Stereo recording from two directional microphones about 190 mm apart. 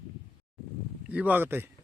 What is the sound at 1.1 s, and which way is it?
Speech, 10° right (ahead or behind).